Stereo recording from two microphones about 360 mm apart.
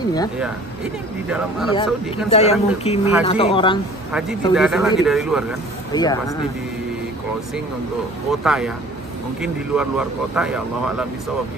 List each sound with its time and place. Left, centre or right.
1.7 s speech: centre
4.1 s speech: centre
5.9 s speech: centre
8.3 s speech: centre